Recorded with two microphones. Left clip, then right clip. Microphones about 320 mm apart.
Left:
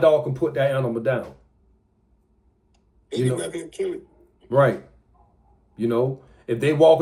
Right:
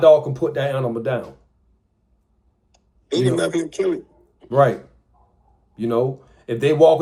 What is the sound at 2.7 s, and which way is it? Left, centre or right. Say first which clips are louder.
Speech: right 6 dB; right.